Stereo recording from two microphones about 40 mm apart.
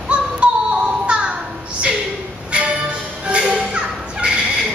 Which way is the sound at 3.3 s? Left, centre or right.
Right.